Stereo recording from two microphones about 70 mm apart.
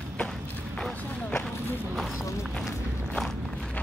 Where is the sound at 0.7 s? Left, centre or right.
Centre.